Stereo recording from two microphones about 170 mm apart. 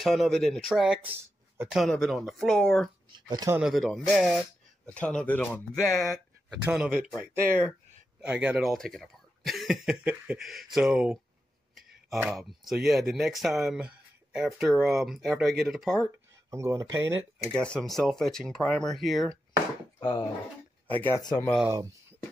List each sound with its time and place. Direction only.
0.0 s speech: centre (ahead or behind)
1.8 s speech: 5° left (ahead or behind)
3.3 s speech: 25° right (ahead or behind)
3.5 s speech: centre (ahead or behind)
8.2 s speech: 5° right (ahead or behind)
11.7 s a sound: centre (ahead or behind)
12.8 s speech: centre (ahead or behind)
16.4 s speech: 15° right (ahead or behind)
17.5 s speech: 5° left (ahead or behind)
20.0 s speech: 25° left (ahead or behind)
20.8 s speech: 10° left (ahead or behind)
21.2 s speech: 25° left (ahead or behind)